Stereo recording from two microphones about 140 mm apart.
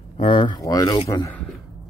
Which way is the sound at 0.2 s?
35° left (ahead or behind).